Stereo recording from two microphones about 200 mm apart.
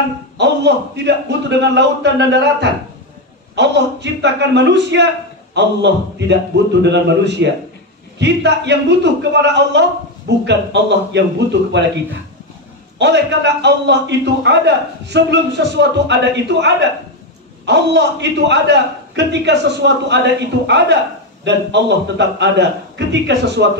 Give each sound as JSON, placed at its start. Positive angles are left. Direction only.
{"t": 0.4, "sound": "a man's voice", "side_deg": -60}
{"t": 13.0, "sound": "a man's voice", "side_deg": -60}